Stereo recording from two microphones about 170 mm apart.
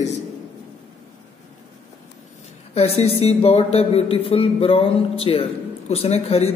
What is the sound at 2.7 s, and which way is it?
A man's voice, 35° left (ahead or behind).